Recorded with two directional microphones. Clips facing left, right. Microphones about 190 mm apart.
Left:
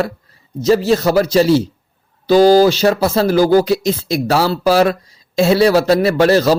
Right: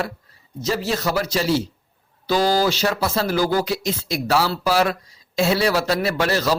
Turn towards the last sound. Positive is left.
turn(degrees=30)  # may be behind; listen again after turning